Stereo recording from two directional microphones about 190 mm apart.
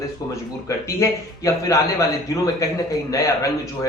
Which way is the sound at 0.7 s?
15° left (ahead or behind).